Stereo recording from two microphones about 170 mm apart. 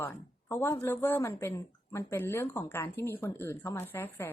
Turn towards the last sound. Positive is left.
turn(degrees=15)  # may be behind; listen again after turning